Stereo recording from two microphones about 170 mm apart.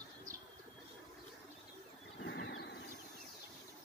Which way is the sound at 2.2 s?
90° left.